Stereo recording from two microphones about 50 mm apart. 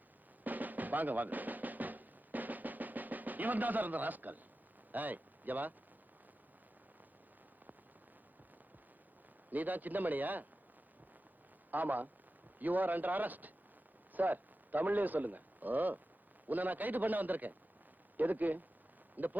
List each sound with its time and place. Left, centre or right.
0.4 s drum: right
4.9 s speech: right
9.5 s a man's voice: right
11.7 s a man's voice: right